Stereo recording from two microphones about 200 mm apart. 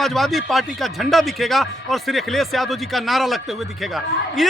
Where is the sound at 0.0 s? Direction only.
Centre (ahead or behind).